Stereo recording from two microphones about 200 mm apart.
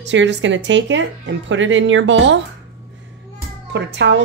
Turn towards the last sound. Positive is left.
turn(degrees=-60)  # may be behind; listen again after turning